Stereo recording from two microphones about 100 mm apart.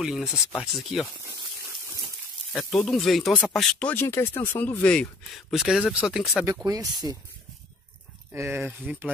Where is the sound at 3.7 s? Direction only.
15° left (ahead or behind).